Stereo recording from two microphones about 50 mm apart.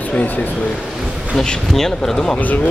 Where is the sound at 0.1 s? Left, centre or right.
Left.